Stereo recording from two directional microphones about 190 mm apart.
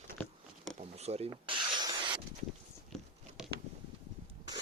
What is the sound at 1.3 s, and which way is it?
Rub, 25° right (ahead or behind).